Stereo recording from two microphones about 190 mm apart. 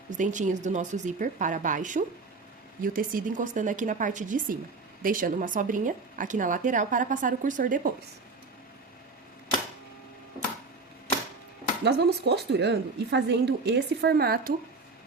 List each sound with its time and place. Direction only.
0.1 s speech: 40° right (ahead or behind)
11.8 s a woman's voice: 60° right (ahead or behind)